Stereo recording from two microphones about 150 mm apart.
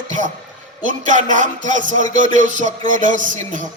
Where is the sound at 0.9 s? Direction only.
55° right (ahead or behind).